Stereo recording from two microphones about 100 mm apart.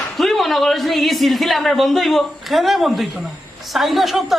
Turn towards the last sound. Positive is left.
turn(degrees=0)  # may be behind; listen again after turning